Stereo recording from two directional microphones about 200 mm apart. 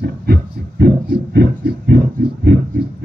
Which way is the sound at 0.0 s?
50° right (ahead or behind).